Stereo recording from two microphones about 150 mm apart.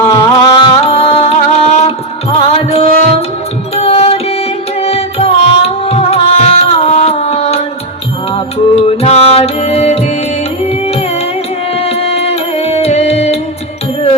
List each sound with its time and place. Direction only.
0.0 s music: 20° left (ahead or behind); by 7.6 s 40° left (ahead or behind)
8.7 s music: 45° left (ahead or behind)
11.8 s music: 40° left (ahead or behind)